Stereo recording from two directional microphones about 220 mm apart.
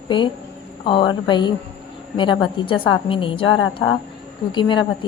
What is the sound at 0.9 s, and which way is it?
A woman's voice, 20° left (ahead or behind).